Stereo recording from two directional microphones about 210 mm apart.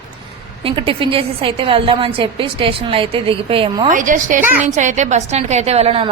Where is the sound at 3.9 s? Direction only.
40° right (ahead or behind).